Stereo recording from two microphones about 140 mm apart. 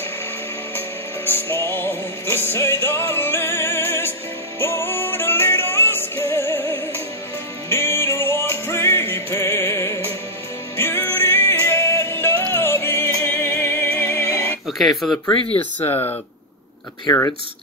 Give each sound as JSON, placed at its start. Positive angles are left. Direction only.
{"t": 0.7, "sound": "music", "side_deg": 15}
{"t": 14.7, "sound": "speech", "side_deg": 0}
{"t": 15.4, "sound": "speech", "side_deg": 10}